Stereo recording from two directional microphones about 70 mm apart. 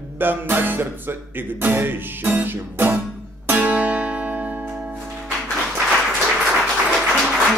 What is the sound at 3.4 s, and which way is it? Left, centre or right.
Guitar, right.